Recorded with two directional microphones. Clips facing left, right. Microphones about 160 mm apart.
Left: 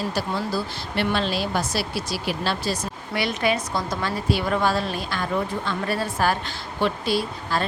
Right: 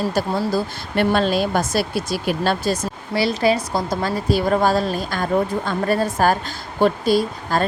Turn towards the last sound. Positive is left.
turn(degrees=-45)  # may be behind; listen again after turning